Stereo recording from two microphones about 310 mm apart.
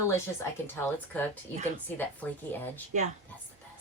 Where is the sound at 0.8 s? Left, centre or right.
Centre.